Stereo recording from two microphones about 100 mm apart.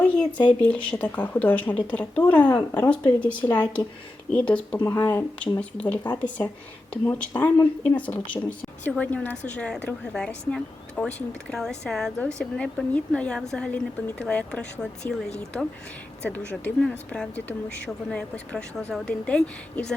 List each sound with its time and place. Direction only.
0.0 s a woman's voice: 10° left (ahead or behind)
16.2 s a woman's voice: 15° left (ahead or behind)